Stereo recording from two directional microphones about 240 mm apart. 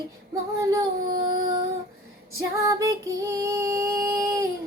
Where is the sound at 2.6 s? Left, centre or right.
Centre.